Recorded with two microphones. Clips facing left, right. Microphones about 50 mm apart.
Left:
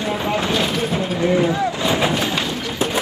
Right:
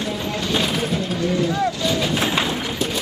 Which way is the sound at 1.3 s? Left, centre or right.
Left.